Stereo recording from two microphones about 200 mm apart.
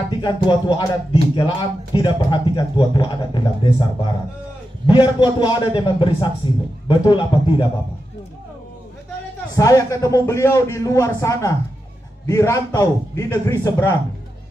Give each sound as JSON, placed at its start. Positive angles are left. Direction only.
{"t": 0.2, "sound": "speech", "side_deg": 25}
{"t": 9.6, "sound": "a man's voice", "side_deg": 15}